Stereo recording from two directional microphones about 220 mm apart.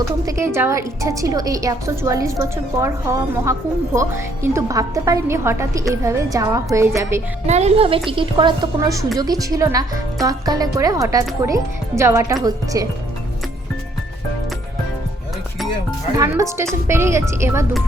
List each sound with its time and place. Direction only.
0.3 s a woman's voice: 10° right (ahead or behind)
7.4 s a woman's voice: 30° right (ahead or behind)
16.1 s a woman's voice: 15° right (ahead or behind)